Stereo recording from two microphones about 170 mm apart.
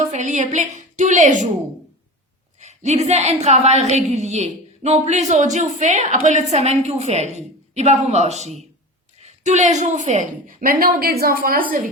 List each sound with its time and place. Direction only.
0.1 s a woman's voice: 45° right (ahead or behind)
2.6 s a woman's voice: 40° right (ahead or behind); by 11.6 s 60° right (ahead or behind)